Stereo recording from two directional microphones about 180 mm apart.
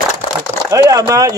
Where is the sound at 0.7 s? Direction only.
20° right (ahead or behind).